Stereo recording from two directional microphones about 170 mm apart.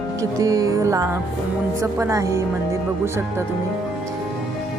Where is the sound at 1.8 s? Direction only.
20° right (ahead or behind).